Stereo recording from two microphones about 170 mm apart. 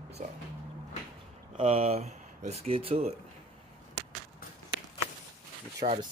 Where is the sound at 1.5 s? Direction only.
40° right (ahead or behind).